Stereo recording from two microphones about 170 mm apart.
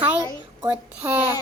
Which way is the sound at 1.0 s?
15° right (ahead or behind).